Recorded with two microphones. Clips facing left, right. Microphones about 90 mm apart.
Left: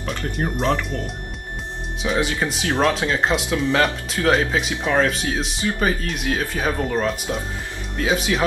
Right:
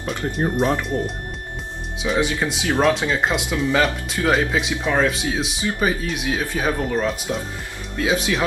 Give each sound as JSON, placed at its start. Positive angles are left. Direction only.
{"t": 0.1, "sound": "speech", "side_deg": -20}
{"t": 2.0, "sound": "speech", "side_deg": 0}